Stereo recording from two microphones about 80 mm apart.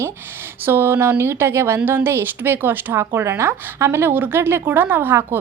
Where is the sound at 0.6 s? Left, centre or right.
Right.